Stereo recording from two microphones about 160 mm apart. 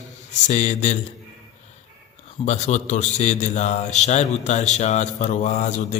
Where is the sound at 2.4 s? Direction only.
45° left (ahead or behind).